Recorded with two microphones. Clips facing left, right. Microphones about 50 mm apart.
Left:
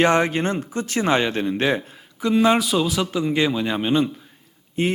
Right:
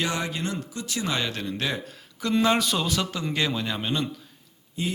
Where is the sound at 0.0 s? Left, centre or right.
Left.